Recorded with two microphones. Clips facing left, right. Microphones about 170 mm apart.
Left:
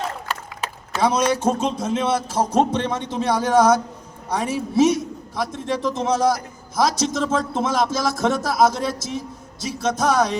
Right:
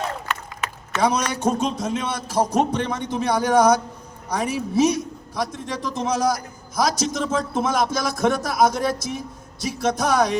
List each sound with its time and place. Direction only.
0.9 s a man's voice: 25° left (ahead or behind)